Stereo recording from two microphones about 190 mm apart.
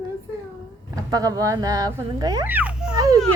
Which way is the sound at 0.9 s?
20° right (ahead or behind).